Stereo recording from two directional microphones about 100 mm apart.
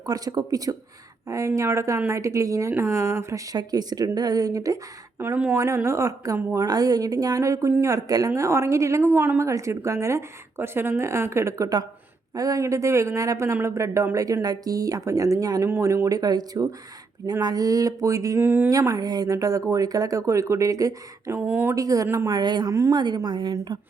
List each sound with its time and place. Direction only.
0.0 s a woman's voice: 40° right (ahead or behind)
5.2 s a woman's voice: 20° right (ahead or behind)
6.7 s a woman's voice: 40° right (ahead or behind)
18.3 s speech: 15° right (ahead or behind)
18.7 s speech: 35° right (ahead or behind)
21.8 s speech: 35° right (ahead or behind)
22.0 s a woman's voice: 25° right (ahead or behind)
22.3 s a woman's voice: 45° right (ahead or behind)
22.7 s speech: 30° right (ahead or behind)
23.0 s a woman's voice: 45° right (ahead or behind)